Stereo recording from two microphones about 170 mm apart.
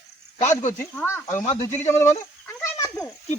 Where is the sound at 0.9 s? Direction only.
10° left (ahead or behind).